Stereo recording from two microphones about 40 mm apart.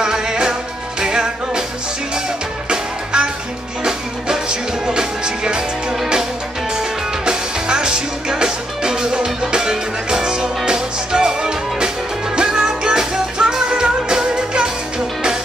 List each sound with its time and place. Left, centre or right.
0.0 s music: centre
2.7 s music: right
7.2 s music: centre